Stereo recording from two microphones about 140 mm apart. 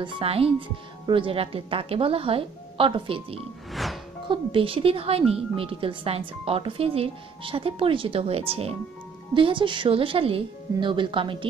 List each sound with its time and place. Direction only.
0.0 s speech: 40° right (ahead or behind)
3.7 s music: centre (ahead or behind)
4.3 s speech: 40° right (ahead or behind)